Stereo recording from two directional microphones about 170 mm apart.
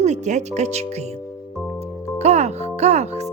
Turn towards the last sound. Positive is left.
turn(degrees=-40)  # may be behind; listen again after turning